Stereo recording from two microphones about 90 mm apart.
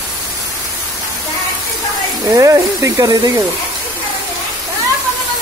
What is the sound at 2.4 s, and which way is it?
Speech, 35° right (ahead or behind).